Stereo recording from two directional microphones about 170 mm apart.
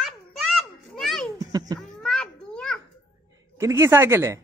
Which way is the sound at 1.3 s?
20° right (ahead or behind).